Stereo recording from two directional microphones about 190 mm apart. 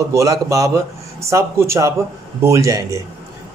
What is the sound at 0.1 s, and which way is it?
Speech, 15° right (ahead or behind).